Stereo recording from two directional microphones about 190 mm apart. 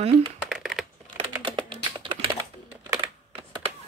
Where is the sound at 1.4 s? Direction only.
25° right (ahead or behind).